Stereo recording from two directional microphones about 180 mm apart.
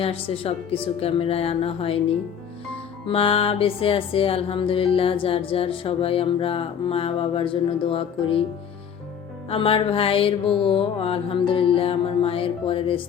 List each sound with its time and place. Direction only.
0.0 s music: 35° left (ahead or behind)
3.1 s music: 30° left (ahead or behind)
9.5 s music: 30° left (ahead or behind)